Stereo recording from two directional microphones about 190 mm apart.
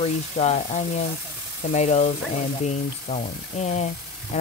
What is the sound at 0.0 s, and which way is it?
Speech, 35° left (ahead or behind).